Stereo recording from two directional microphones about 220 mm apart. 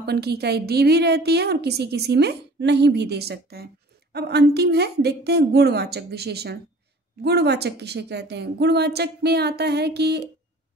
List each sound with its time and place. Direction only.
0.0 s a woman's voice: 45° right (ahead or behind)